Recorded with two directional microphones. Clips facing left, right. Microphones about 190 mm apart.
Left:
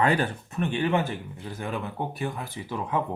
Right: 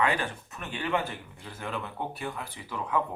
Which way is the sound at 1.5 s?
15° left (ahead or behind).